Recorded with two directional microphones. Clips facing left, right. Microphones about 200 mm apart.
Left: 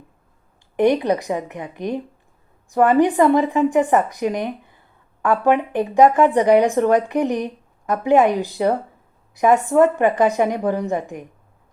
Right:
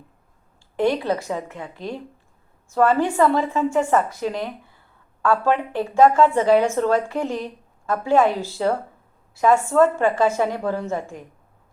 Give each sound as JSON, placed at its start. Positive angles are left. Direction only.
{"t": 0.8, "sound": "a woman's voice", "side_deg": 20}